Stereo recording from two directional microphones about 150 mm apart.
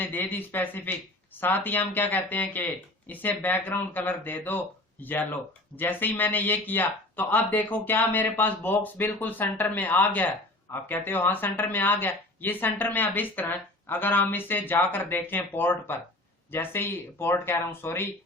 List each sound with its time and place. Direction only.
0.0 s speech: 10° left (ahead or behind)